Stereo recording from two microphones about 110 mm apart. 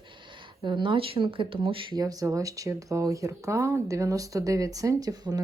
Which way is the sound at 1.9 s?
35° right (ahead or behind).